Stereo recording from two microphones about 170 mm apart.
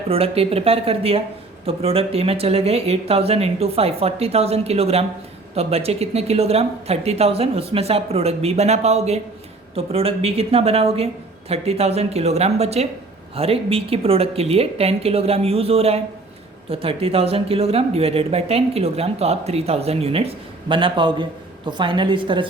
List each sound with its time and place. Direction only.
0.1 s a woman's voice: 35° right (ahead or behind)